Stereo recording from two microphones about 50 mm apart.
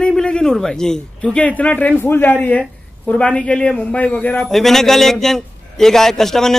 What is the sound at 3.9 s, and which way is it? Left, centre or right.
Speech, left.